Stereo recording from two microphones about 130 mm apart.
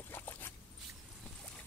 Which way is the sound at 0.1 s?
15° left (ahead or behind).